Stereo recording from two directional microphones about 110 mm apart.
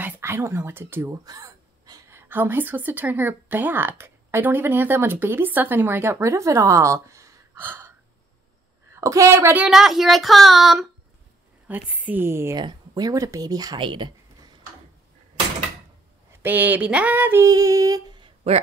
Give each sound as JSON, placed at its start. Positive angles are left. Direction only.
{"t": 0.0, "sound": "speech", "side_deg": -20}
{"t": 1.2, "sound": "a woman's voice", "side_deg": -35}
{"t": 8.9, "sound": "a woman's voice", "side_deg": -30}
{"t": 9.7, "sound": "speech", "side_deg": -5}
{"t": 11.6, "sound": "a sound", "side_deg": -15}
{"t": 12.5, "sound": "speech", "side_deg": -40}
{"t": 13.7, "sound": "a sound", "side_deg": -45}
{"t": 16.4, "sound": "a sound", "side_deg": -15}
{"t": 17.5, "sound": "speech", "side_deg": -30}
{"t": 18.4, "sound": "a man's voice", "side_deg": -65}